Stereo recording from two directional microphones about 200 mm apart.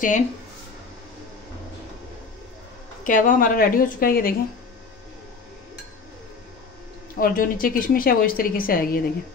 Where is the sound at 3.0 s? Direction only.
40° left (ahead or behind).